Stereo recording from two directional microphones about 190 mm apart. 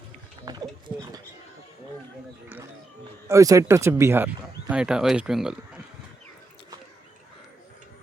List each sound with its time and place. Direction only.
0.4 s wild animals: 20° right (ahead or behind)
3.2 s speech: 15° right (ahead or behind)